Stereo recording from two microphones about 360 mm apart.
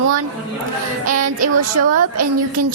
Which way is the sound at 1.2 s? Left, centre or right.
Right.